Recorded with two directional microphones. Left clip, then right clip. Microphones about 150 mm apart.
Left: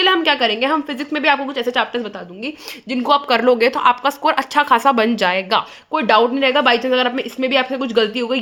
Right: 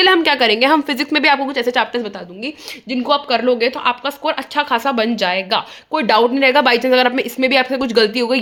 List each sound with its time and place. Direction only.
0.0 s a woman's voice: 35° right (ahead or behind); by 1.4 s 50° right (ahead or behind)
1.5 s a woman's voice: 30° right (ahead or behind)
2.9 s speech: 15° left (ahead or behind)
5.9 s speech: 15° right (ahead or behind)
6.3 s speech: 30° right (ahead or behind)